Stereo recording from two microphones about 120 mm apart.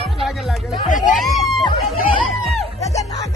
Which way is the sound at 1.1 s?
Centre (ahead or behind).